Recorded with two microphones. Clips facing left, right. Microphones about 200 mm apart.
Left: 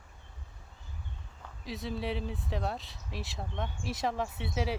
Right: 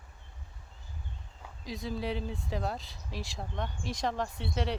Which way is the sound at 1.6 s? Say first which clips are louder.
Even; centre (ahead or behind).